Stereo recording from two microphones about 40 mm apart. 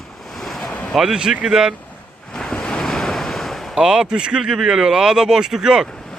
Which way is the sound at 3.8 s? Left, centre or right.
Right.